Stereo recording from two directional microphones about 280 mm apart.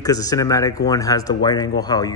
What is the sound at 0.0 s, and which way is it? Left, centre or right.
A man's voice, centre.